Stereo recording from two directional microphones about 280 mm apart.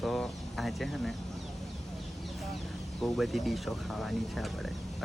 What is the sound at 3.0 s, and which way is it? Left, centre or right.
Speech, centre.